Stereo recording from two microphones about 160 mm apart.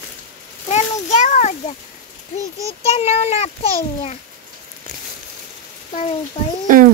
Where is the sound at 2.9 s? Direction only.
40° left (ahead or behind).